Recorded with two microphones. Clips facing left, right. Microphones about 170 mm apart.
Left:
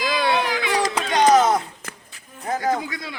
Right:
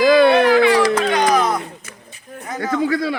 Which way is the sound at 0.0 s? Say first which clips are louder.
Right 10 dB; 60° right (ahead or behind).